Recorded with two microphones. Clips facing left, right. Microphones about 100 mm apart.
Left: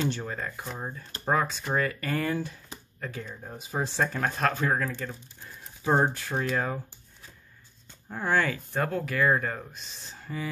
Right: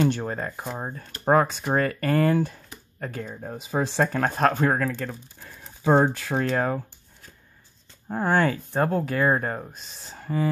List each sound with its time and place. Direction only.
0.0 s speech: 50° right (ahead or behind)
3.5 s speech: 80° right
4.0 s speech: 50° right (ahead or behind)
5.6 s speech: 90° right
6.5 s speech: 50° right (ahead or behind)
8.1 s speech: 40° right (ahead or behind)